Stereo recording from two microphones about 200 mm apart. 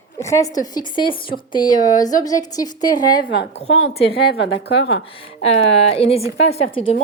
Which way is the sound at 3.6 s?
70° left (ahead or behind).